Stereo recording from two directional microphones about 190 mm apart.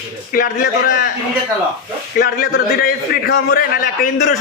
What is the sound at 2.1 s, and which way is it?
A man's voice, 50° left (ahead or behind).